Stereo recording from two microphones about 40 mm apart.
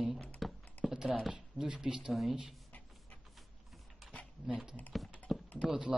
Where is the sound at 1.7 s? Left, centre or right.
Centre.